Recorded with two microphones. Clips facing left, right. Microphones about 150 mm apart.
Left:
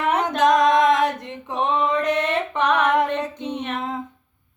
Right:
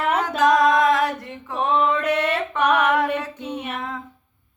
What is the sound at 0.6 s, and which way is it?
Female singing, 20° left (ahead or behind).